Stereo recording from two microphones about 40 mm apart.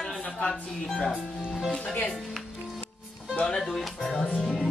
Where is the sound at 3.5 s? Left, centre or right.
Centre.